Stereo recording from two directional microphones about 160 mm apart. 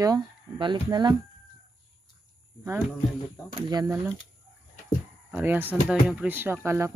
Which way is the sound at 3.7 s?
20° right (ahead or behind).